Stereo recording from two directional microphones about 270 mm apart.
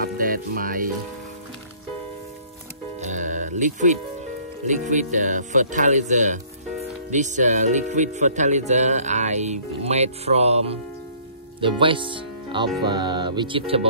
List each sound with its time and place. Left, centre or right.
0.0 s music: right
3.0 s music: right
4.6 s speech: right